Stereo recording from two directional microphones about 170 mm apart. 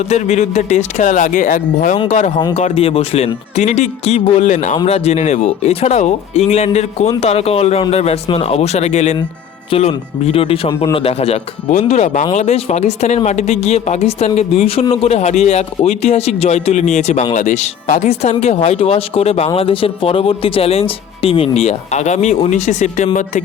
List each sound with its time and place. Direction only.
0.1 s speech: 40° left (ahead or behind)